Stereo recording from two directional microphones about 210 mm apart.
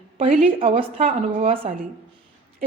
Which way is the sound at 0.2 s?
30° right (ahead or behind).